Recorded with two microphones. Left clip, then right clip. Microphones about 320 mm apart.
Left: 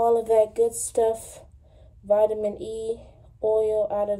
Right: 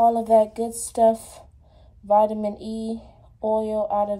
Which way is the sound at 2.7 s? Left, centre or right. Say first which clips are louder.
Left 2 dB; centre.